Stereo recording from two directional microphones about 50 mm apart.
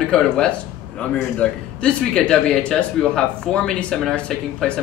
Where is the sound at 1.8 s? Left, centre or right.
Centre.